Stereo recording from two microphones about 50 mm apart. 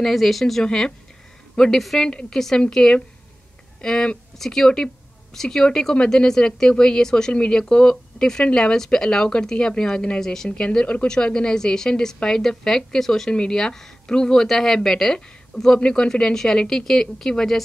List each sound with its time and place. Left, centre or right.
0.0 s speech: centre
0.7 s a woman's voice: centre